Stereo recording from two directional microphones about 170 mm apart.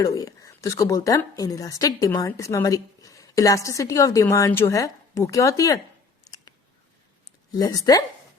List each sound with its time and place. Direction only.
0.0 s a woman's voice: 20° left (ahead or behind)
6.2 s a sound: 20° left (ahead or behind)
7.5 s a woman's voice: 20° left (ahead or behind)